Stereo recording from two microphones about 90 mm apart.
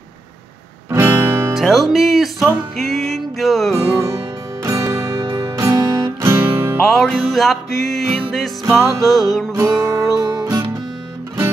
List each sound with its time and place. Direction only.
0.9 s guitar: 25° right (ahead or behind)
1.5 s music: centre (ahead or behind)
3.7 s music: 30° right (ahead or behind)
6.9 s music: 5° left (ahead or behind)
9.0 s music: 45° left (ahead or behind)
9.5 s music: 35° right (ahead or behind)